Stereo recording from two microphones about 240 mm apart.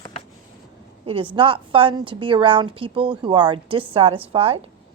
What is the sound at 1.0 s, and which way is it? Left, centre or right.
A woman's voice, right.